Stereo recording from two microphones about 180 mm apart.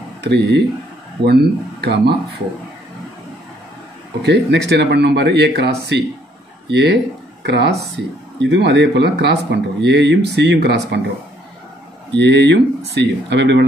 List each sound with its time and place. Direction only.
0.2 s speech: 70° right (ahead or behind)
4.2 s speech: 70° right (ahead or behind)
12.1 s speech: 80° right